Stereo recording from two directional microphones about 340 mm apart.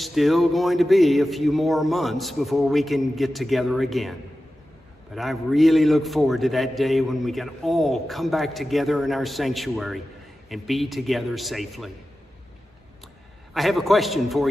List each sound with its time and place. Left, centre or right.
0.0 s a man's voice: centre
13.5 s a man's voice: centre